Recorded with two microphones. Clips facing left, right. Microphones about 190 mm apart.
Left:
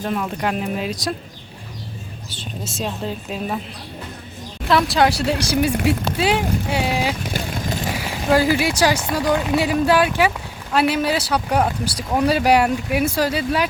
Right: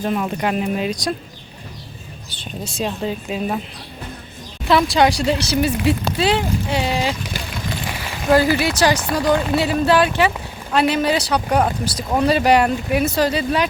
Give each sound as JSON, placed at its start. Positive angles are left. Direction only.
{"t": 0.0, "sound": "speech", "side_deg": -5}
{"t": 2.3, "sound": "speech", "side_deg": 0}
{"t": 4.7, "sound": "speech", "side_deg": 0}
{"t": 7.3, "sound": "vehicle", "side_deg": 45}
{"t": 7.9, "sound": "speech", "side_deg": 10}